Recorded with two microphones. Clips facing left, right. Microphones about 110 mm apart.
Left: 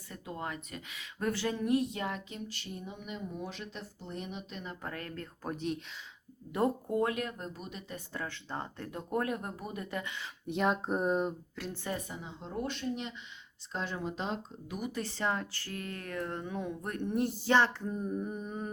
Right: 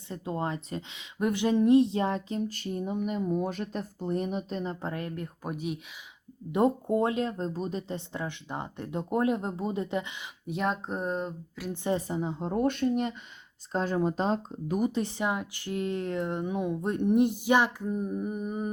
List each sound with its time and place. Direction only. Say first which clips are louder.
0.1 s speech: right 7 dB; 30° right (ahead or behind); by 5.8 s 10° right (ahead or behind)
6.5 s speech: right 6 dB; 20° right (ahead or behind)
10.4 s speech: even; centre (ahead or behind)
11.7 s speech: right 10 dB; 20° right (ahead or behind)
11.9 s speech: right 10 dB; 35° right (ahead or behind)
14.9 s speech: right 4 dB; 15° right (ahead or behind)